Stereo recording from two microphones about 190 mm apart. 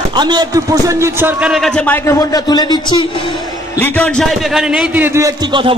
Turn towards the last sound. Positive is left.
turn(degrees=-15)  # may be behind; listen again after turning